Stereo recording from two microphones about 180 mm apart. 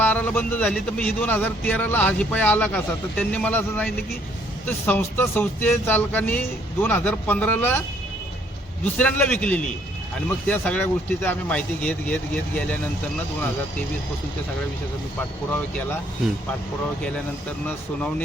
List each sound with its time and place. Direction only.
0.0 s speech: 10° left (ahead or behind)
8.8 s speech: 10° left (ahead or behind)